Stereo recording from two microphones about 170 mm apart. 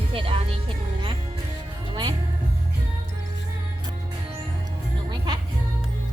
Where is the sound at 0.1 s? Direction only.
30° right (ahead or behind).